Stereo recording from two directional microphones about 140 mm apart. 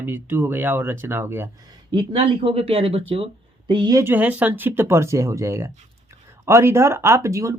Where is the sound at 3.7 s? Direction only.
30° right (ahead or behind).